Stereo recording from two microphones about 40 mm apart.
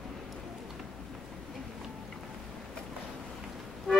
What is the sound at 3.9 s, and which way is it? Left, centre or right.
Music, centre.